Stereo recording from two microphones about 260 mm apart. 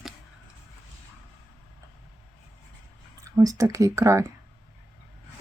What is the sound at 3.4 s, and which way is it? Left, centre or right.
Speech, centre.